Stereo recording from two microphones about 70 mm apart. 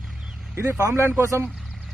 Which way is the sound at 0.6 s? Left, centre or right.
Right.